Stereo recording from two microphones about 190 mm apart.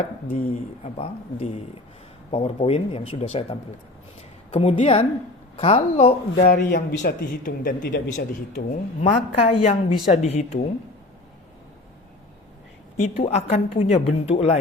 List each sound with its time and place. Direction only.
0.0 s a woman's voice: 30° left (ahead or behind)
6.3 s speech: 55° left (ahead or behind)
7.0 s a woman's voice: 45° left (ahead or behind)
13.1 s a woman's voice: 35° left (ahead or behind)